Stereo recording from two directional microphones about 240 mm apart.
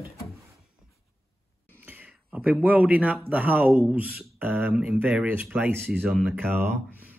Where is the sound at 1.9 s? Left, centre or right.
Centre.